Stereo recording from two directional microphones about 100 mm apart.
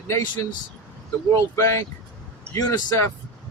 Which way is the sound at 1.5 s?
30° left (ahead or behind).